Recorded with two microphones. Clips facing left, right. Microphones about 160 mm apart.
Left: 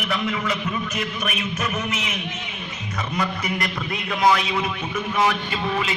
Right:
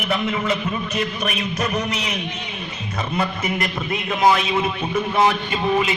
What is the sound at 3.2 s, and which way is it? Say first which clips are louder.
A man's voice: right 2 dB; 25° right (ahead or behind).